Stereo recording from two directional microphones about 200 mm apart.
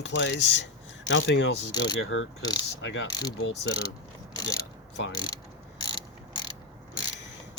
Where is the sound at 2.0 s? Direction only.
80° left.